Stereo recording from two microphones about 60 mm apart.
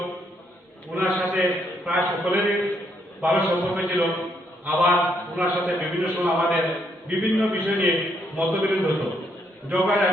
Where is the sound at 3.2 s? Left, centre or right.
Right.